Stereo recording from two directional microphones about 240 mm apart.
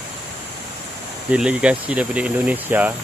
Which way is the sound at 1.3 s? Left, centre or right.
Centre.